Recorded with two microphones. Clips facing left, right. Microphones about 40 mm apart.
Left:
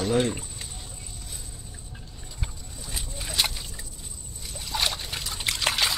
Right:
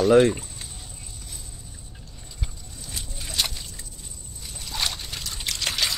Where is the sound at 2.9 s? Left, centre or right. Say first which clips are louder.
Left 1 dB; centre.